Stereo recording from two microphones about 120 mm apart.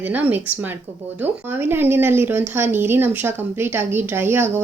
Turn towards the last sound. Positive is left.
turn(degrees=-20)  # may be behind; listen again after turning